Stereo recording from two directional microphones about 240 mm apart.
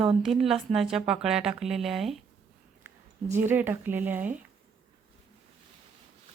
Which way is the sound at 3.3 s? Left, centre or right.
Centre.